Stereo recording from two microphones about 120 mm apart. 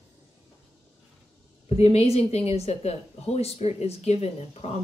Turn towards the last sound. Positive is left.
turn(degrees=60)  # may be behind; listen again after turning